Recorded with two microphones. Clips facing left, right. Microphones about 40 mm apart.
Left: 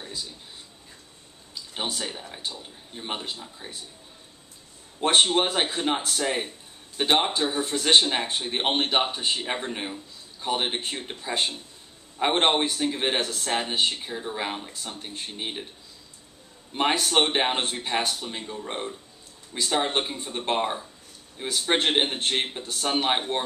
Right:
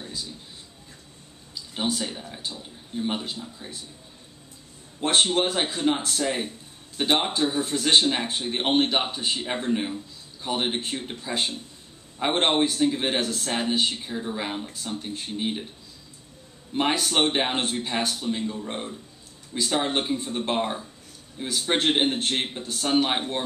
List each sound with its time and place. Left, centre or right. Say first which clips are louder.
0.0 s a sound: even; centre
1.5 s speech: right 4 dB; centre
5.0 s speech: left 1 dB; centre
16.7 s speech: left 1 dB; centre